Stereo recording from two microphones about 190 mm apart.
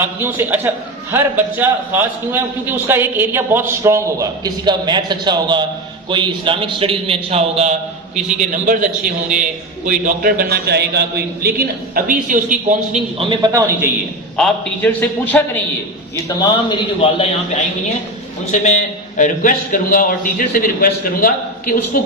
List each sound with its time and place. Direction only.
0.0 s a man's voice: 10° right (ahead or behind)
14.3 s a man's voice: 5° left (ahead or behind)
16.4 s a man's voice: 25° left (ahead or behind)
18.6 s a man's voice: 40° left (ahead or behind)